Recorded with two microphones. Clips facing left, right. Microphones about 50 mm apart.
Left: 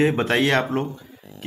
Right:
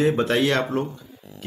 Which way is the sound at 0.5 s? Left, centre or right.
Centre.